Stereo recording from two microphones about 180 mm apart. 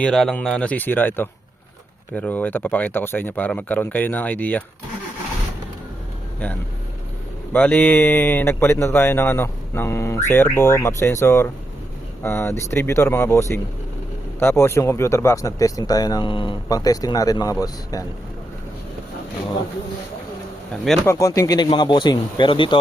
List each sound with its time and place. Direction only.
0.0 s speech: 5° left (ahead or behind)
7.5 s speech: 10° left (ahead or behind)
20.8 s speech: 5° left (ahead or behind)
21.1 s speech: 15° left (ahead or behind)